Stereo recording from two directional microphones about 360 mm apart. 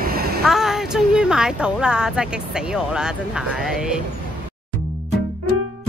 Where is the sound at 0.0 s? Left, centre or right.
Right.